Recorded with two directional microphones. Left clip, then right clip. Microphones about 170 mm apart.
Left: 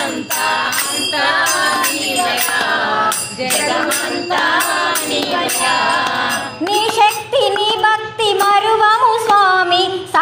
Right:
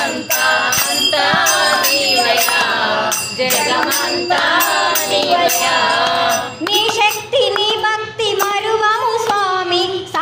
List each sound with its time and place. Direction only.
6.7 s music: 35° left (ahead or behind)